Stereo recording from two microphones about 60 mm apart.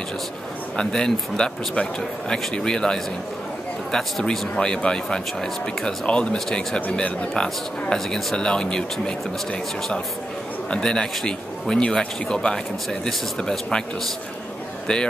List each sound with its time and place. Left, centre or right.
0.7 s speech: centre
10.7 s speech: centre